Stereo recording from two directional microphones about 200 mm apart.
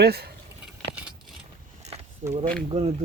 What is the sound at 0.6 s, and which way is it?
Keys jangling, 5° right (ahead or behind).